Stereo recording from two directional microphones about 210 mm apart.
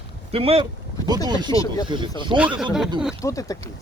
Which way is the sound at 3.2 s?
15° left (ahead or behind).